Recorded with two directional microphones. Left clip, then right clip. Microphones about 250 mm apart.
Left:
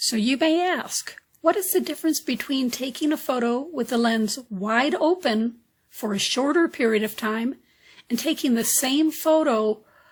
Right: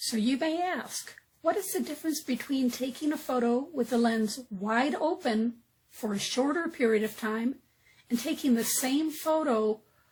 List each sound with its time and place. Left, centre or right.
0.0 s speech: left